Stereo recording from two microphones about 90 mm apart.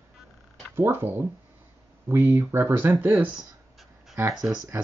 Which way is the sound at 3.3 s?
Centre (ahead or behind).